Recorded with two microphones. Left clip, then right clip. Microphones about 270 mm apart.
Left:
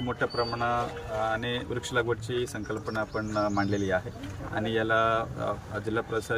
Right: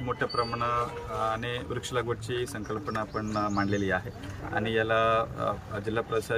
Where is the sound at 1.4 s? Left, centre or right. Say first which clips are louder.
Left 2 dB; centre.